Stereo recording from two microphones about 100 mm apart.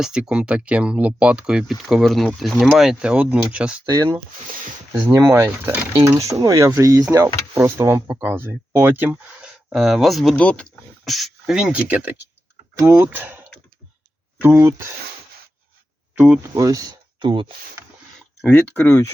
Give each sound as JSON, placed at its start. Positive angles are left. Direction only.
{"t": 0.0, "sound": "speech", "side_deg": -10}
{"t": 3.8, "sound": "speech", "side_deg": -40}
{"t": 5.3, "sound": "speech", "side_deg": -25}
{"t": 6.1, "sound": "speech", "side_deg": -30}
{"t": 9.0, "sound": "speech", "side_deg": -10}
{"t": 10.3, "sound": "speech", "side_deg": 10}
{"t": 11.0, "sound": "speech", "side_deg": 0}
{"t": 12.8, "sound": "speech", "side_deg": -25}
{"t": 14.4, "sound": "speech", "side_deg": -30}
{"t": 16.1, "sound": "speech", "side_deg": -10}
{"t": 16.6, "sound": "speech", "side_deg": -35}
{"t": 17.2, "sound": "speech", "side_deg": -55}
{"t": 18.4, "sound": "speech", "side_deg": 20}